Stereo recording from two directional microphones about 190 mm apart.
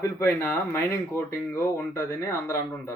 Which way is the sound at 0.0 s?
15° left (ahead or behind).